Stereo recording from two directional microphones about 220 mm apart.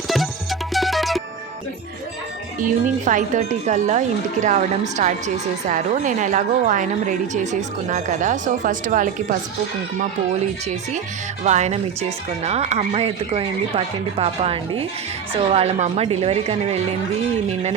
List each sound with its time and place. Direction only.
0.7 s music: centre (ahead or behind)
2.6 s a woman's voice: 35° right (ahead or behind)
11.4 s speech: 30° right (ahead or behind)